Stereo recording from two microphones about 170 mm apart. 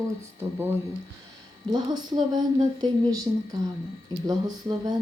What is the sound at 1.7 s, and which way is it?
A woman's voice, 25° right (ahead or behind).